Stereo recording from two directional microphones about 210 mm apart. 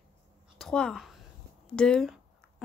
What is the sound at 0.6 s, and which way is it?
A woman's voice, centre (ahead or behind).